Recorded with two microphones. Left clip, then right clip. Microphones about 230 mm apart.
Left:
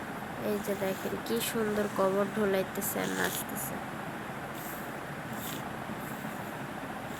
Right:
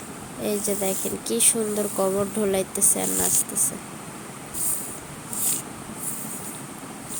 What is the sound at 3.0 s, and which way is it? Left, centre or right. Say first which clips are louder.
Speech: right 5 dB; right.